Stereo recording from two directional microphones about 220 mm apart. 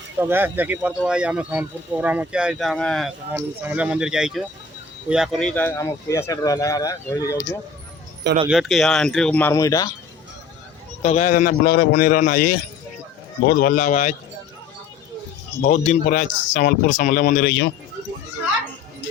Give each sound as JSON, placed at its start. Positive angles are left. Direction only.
{"t": 0.2, "sound": "speech", "side_deg": -10}
{"t": 3.3, "sound": "speech", "side_deg": -10}
{"t": 8.4, "sound": "speech", "side_deg": 0}
{"t": 11.0, "sound": "a man's voice", "side_deg": 30}
{"t": 15.6, "sound": "a man's voice", "side_deg": 35}